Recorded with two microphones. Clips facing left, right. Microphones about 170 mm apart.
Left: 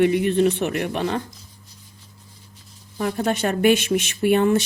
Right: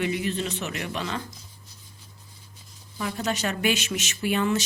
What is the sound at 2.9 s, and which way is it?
Speech, 50° left (ahead or behind).